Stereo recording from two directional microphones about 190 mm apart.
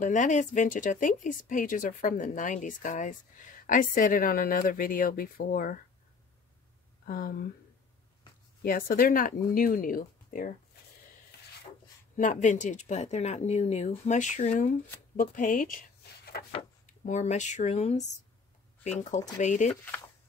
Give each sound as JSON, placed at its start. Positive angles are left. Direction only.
{"t": 0.0, "sound": "speech", "side_deg": 40}
{"t": 7.1, "sound": "speech", "side_deg": 50}
{"t": 8.6, "sound": "speech", "side_deg": 50}
{"t": 12.2, "sound": "speech", "side_deg": 40}
{"t": 19.7, "sound": "speech", "side_deg": 10}